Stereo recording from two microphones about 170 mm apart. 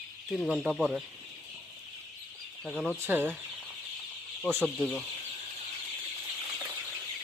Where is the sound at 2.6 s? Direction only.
Centre (ahead or behind).